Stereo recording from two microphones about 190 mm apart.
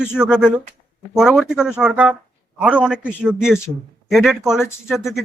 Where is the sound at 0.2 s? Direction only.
5° right (ahead or behind).